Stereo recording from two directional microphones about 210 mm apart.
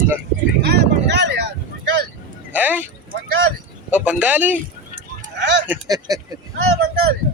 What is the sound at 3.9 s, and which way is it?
Speech, 5° right (ahead or behind).